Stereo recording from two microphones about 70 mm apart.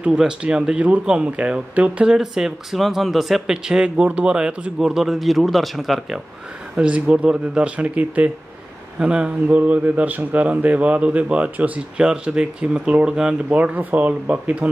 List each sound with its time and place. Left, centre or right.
0.2 s speech: centre
2.1 s speech: centre
4.7 s speech: centre
6.8 s a man's voice: centre
13.6 s a man's voice: right